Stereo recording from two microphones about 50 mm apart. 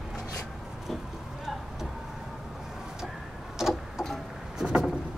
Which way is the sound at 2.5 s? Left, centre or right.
Centre.